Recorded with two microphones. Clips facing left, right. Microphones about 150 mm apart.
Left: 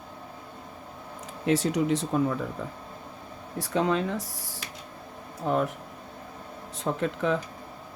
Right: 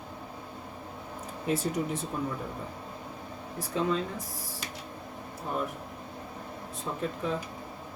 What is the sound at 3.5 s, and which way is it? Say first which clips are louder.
Speech: left 4 dB; 90° left.